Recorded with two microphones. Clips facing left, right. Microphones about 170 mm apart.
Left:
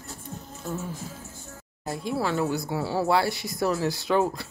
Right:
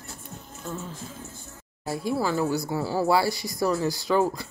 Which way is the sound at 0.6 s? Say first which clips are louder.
Left 2 dB; 10° left (ahead or behind).